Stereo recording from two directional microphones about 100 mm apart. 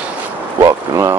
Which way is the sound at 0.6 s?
35° right (ahead or behind).